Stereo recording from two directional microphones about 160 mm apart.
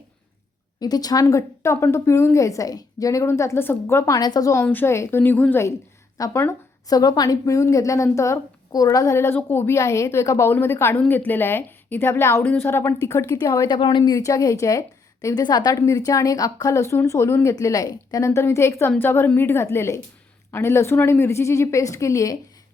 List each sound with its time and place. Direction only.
0.8 s a woman's voice: 25° left (ahead or behind)